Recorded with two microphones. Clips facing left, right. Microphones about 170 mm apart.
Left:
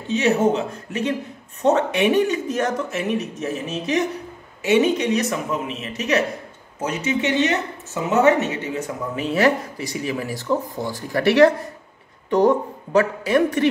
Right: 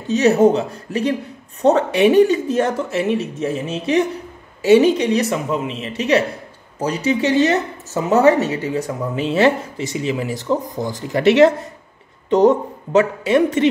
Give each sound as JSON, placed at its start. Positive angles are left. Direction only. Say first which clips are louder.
{"t": 0.1, "sound": "speech", "louder": "right 5 dB", "side_deg": -40}